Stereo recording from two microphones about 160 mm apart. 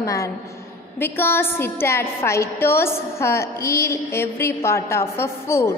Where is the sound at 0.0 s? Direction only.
20° left (ahead or behind).